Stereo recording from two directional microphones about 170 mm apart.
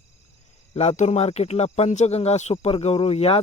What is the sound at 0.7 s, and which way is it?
Speech, 40° left (ahead or behind).